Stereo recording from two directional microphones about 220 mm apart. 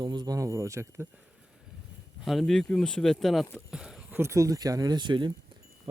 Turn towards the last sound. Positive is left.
turn(degrees=-20)  # may be behind; listen again after turning